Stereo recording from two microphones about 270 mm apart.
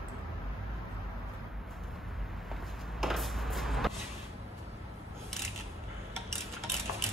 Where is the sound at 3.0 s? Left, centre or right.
Centre.